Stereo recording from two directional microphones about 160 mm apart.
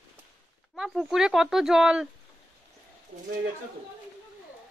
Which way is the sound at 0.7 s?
5° right (ahead or behind).